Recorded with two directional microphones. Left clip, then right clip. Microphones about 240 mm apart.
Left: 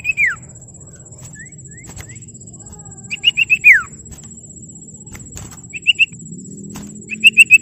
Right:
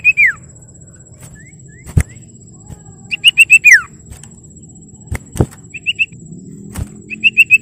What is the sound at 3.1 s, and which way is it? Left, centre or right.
Whistle, centre.